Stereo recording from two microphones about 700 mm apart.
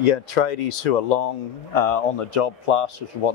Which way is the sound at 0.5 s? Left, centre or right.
Left.